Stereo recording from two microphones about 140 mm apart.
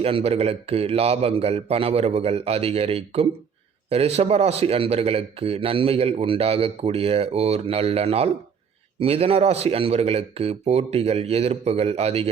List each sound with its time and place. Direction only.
0.0 s speech: 45° right (ahead or behind)